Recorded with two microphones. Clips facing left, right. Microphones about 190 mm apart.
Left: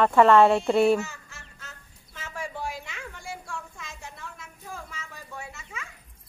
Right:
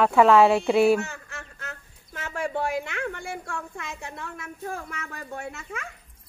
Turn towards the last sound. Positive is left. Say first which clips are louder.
# right 6 dB
turn(degrees=-60)  # may be behind; listen again after turning